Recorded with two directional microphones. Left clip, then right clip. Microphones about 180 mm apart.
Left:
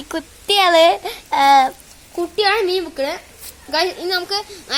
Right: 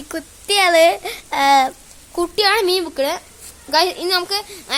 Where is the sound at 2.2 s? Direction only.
50° right (ahead or behind).